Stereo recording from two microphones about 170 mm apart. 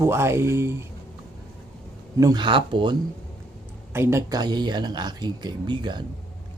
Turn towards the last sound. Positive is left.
turn(degrees=-25)  # may be behind; listen again after turning